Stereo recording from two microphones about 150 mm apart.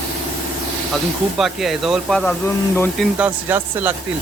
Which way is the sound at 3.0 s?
10° right (ahead or behind).